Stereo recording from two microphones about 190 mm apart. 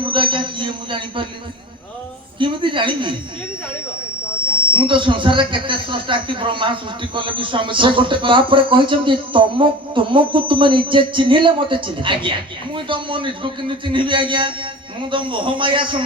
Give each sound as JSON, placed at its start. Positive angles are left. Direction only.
{"t": 0.0, "sound": "speech", "side_deg": -25}
{"t": 2.4, "sound": "speech", "side_deg": -25}
{"t": 4.7, "sound": "speech", "side_deg": -25}